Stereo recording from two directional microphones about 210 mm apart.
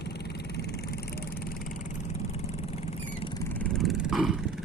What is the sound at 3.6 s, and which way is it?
Vehicle, centre (ahead or behind).